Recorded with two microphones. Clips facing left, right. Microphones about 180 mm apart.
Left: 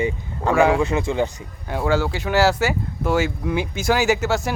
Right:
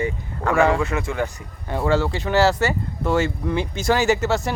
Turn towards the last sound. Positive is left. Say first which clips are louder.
# even
turn(degrees=0)  # may be behind; listen again after turning